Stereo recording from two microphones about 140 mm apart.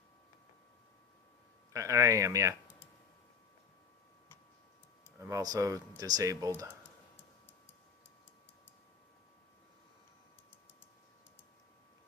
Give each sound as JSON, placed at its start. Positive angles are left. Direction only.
{"t": 1.7, "sound": "speech", "side_deg": -20}
{"t": 5.1, "sound": "speech", "side_deg": -20}